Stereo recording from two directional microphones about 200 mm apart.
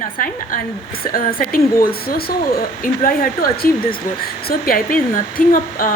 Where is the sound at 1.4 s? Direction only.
45° left (ahead or behind).